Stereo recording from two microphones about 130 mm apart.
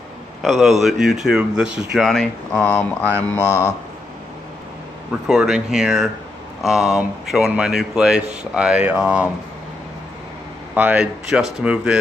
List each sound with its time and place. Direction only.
0.4 s a man's voice: centre (ahead or behind); by 3.7 s 20° left (ahead or behind)
5.3 s a man's voice: 5° right (ahead or behind)
10.7 s speech: 10° right (ahead or behind)